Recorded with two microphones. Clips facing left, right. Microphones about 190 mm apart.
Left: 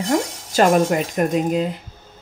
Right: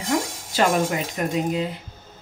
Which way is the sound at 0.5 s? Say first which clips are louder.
Left 6 dB; 50° left (ahead or behind).